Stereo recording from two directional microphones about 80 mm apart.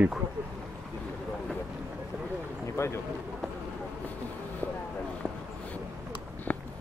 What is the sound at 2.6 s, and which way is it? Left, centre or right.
Speech, left.